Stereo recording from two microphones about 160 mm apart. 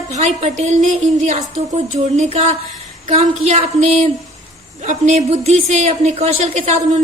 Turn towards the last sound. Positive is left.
turn(degrees=-40)  # may be behind; listen again after turning